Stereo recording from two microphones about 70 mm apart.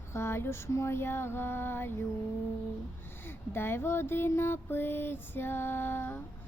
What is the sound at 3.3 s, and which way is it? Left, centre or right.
Music, left.